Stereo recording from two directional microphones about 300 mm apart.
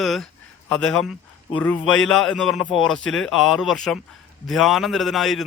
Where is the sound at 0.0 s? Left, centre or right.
Centre.